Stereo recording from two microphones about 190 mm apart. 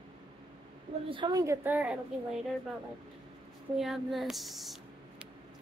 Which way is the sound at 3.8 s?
Centre (ahead or behind).